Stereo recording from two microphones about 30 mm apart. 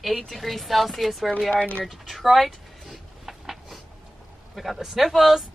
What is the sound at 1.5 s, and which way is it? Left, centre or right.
Speech, left.